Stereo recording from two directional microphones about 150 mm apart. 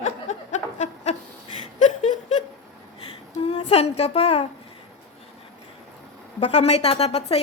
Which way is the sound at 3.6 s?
45° left (ahead or behind).